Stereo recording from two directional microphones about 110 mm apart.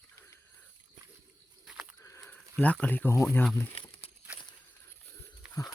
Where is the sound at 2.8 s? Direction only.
15° left (ahead or behind).